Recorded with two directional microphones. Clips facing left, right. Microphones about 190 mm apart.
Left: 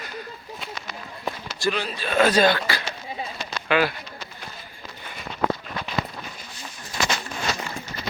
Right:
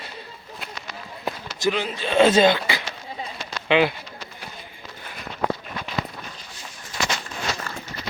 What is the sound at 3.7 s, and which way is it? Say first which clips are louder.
Speech: right 3 dB; 20° right (ahead or behind).